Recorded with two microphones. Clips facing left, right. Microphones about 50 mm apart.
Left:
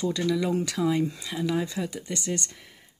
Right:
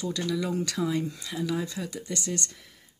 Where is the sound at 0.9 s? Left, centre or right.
Centre.